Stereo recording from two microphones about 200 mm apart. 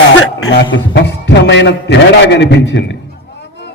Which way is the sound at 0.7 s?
55° left (ahead or behind).